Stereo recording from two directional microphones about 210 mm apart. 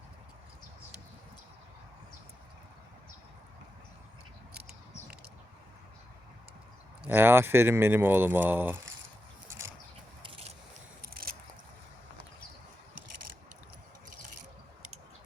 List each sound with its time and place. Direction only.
7.0 s speech: 10° right (ahead or behind)
10.2 s scrape: 25° right (ahead or behind)
11.0 s biting: 45° right (ahead or behind)